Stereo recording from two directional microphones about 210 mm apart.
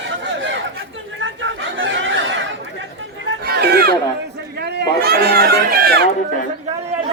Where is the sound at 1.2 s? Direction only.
65° right (ahead or behind).